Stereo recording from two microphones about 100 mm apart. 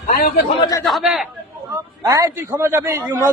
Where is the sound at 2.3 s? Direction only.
25° right (ahead or behind).